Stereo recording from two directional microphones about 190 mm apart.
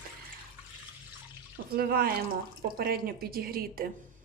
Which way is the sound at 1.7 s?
50° right (ahead or behind).